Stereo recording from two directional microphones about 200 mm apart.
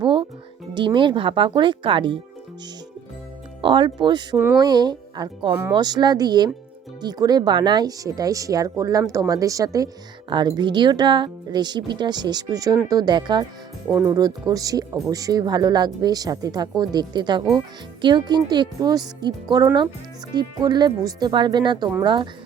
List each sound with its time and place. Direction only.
0.0 s music: 25° right (ahead or behind)
0.7 s speech: 25° right (ahead or behind)
3.6 s speech: 25° right (ahead or behind)